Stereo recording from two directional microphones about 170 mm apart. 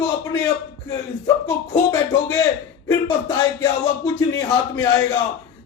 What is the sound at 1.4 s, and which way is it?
A man's voice, 15° left (ahead or behind).